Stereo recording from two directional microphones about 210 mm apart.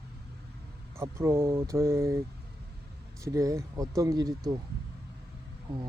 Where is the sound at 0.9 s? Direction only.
10° right (ahead or behind).